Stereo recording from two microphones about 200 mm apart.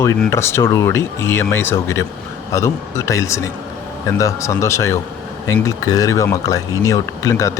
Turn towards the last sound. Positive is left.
turn(degrees=15)  # may be behind; listen again after turning